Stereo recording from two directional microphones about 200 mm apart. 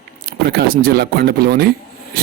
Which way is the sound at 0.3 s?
50° right (ahead or behind).